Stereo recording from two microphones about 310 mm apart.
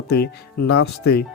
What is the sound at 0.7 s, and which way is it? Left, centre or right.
Speech, left.